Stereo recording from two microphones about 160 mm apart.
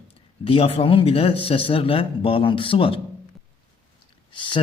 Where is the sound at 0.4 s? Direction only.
35° left (ahead or behind).